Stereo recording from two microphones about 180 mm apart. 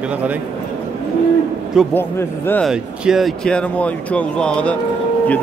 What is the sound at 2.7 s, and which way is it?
Speech, centre (ahead or behind).